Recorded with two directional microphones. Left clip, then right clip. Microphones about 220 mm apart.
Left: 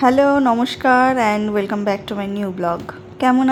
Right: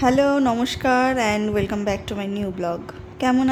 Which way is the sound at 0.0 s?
10° left (ahead or behind).